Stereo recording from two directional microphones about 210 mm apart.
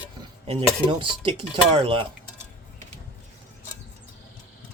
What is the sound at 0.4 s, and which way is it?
Speech, 25° right (ahead or behind).